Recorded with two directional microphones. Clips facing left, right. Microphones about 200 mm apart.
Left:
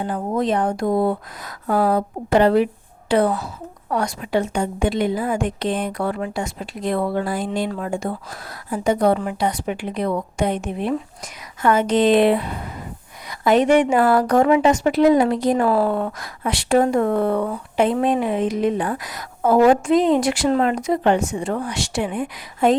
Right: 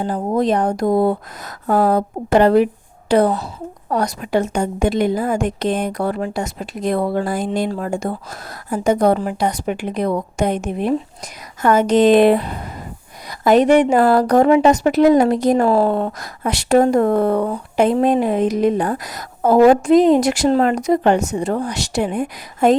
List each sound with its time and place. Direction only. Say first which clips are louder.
0.0 s a woman's voice: right 4 dB; 35° right (ahead or behind)
15.6 s a woman's voice: right 3 dB; 25° right (ahead or behind)
16.1 s a woman's voice: right 2 dB; 40° right (ahead or behind)